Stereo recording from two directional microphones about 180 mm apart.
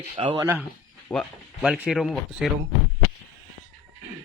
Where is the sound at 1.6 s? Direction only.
5° right (ahead or behind).